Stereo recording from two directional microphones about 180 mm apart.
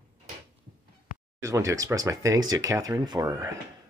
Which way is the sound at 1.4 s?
15° right (ahead or behind).